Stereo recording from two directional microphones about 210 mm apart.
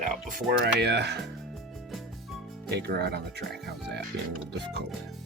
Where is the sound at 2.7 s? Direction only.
50° right (ahead or behind).